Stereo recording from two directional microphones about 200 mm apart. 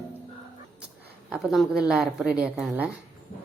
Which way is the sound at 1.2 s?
Centre (ahead or behind).